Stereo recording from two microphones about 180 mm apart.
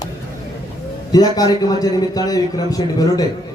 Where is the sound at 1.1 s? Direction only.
20° left (ahead or behind).